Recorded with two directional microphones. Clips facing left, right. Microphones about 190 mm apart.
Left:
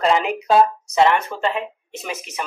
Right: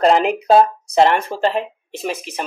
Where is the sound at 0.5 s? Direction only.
35° right (ahead or behind).